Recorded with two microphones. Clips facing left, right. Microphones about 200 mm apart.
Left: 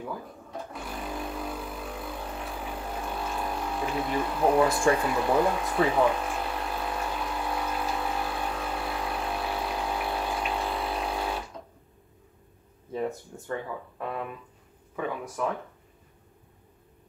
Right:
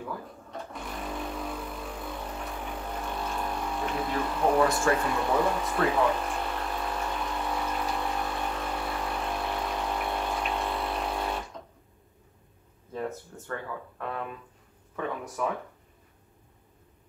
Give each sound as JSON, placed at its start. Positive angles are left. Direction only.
{"t": 0.0, "sound": "sewing machine", "side_deg": 5}
{"t": 5.6, "sound": "pump", "side_deg": 0}
{"t": 12.9, "sound": "speech", "side_deg": 5}